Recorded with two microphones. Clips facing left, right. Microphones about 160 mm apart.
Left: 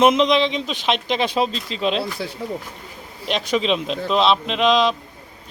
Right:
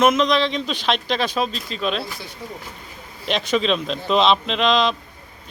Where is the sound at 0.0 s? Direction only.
25° left (ahead or behind).